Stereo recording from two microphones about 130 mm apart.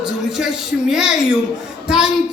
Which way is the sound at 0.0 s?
5° right (ahead or behind).